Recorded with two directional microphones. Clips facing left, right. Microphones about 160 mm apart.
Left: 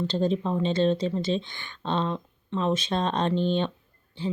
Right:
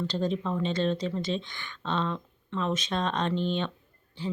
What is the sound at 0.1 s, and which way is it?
Speech, 30° left (ahead or behind).